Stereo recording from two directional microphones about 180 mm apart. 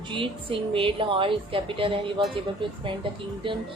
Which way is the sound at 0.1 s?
30° right (ahead or behind).